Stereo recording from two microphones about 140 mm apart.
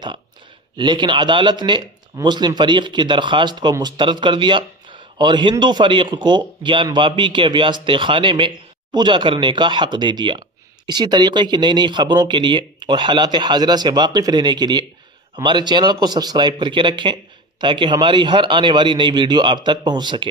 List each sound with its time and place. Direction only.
0.7 s speech: 35° right (ahead or behind)